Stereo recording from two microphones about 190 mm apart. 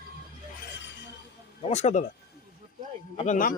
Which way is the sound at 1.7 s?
35° left (ahead or behind).